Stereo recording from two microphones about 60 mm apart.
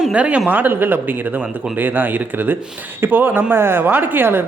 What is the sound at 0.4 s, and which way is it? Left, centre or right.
Speech, right.